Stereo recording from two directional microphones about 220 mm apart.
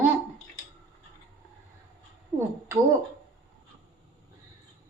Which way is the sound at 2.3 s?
15° right (ahead or behind).